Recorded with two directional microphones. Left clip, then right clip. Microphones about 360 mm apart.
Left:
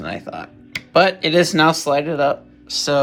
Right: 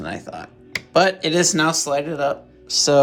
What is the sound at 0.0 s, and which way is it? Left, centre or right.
Speech, centre.